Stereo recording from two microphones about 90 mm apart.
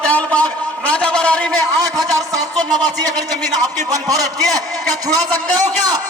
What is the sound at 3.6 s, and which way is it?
A man's voice, 40° right (ahead or behind).